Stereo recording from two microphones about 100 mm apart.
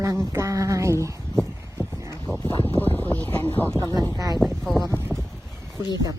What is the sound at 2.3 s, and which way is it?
Speech, 5° left (ahead or behind).